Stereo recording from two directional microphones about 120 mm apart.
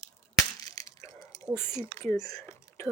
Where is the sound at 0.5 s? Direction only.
30° left (ahead or behind).